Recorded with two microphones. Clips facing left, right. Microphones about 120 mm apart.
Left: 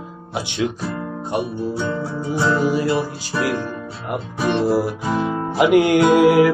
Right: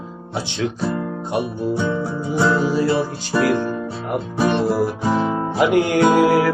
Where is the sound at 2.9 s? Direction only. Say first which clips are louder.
Right 2 dB; 35° right (ahead or behind).